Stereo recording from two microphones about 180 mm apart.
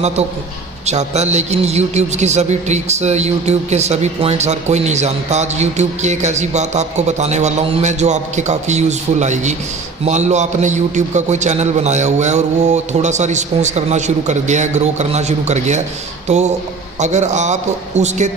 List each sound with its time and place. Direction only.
0.8 s a man's voice: 40° right (ahead or behind)